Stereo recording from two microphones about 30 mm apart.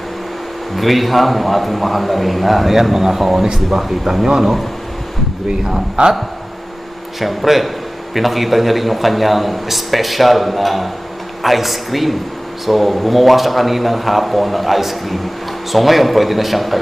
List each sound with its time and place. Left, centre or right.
0.8 s a man's voice: centre
3.4 s speech: centre
7.2 s a man's voice: centre